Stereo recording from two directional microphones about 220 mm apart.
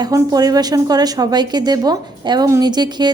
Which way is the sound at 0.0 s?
15° right (ahead or behind).